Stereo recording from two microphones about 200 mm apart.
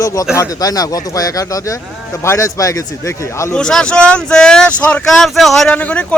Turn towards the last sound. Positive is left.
turn(degrees=5)  # may be behind; listen again after turning